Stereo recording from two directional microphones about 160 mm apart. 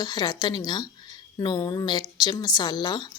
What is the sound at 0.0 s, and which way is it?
A woman's voice, 25° left (ahead or behind).